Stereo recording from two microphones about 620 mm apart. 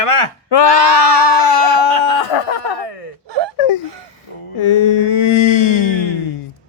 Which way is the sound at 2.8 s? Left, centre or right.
Left.